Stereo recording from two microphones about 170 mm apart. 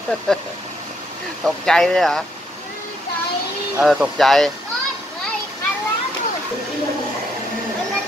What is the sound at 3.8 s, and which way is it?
Speech, 5° right (ahead or behind).